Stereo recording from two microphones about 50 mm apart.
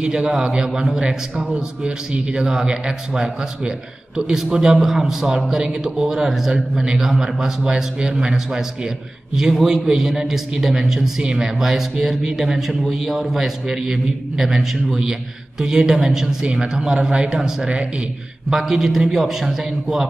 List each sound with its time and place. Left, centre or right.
0.0 s a man's voice: centre